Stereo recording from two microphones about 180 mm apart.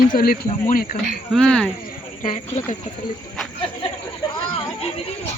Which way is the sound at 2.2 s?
45° left (ahead or behind).